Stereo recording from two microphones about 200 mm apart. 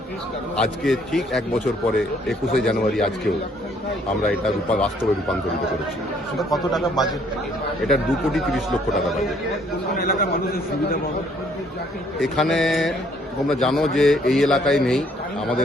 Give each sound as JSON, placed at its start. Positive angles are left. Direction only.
{"t": 0.5, "sound": "a man's voice", "side_deg": 0}
{"t": 6.5, "sound": "a man's voice", "side_deg": 0}
{"t": 9.9, "sound": "a man's voice", "side_deg": 50}
{"t": 12.2, "sound": "a man's voice", "side_deg": 0}